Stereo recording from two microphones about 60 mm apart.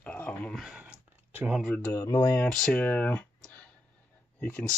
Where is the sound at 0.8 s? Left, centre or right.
Right.